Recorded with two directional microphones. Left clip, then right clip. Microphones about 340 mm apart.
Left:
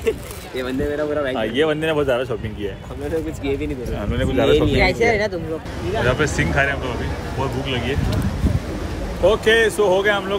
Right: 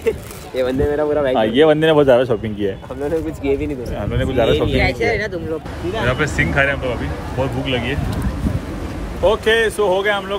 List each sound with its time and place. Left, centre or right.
0.6 s speech: centre
4.4 s speech: centre
4.8 s a man's voice: centre
9.2 s speech: centre